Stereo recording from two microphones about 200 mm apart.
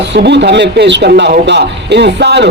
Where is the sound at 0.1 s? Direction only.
60° right (ahead or behind).